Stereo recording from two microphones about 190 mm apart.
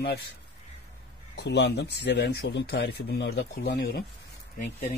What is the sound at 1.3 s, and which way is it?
Speech, 60° left (ahead or behind).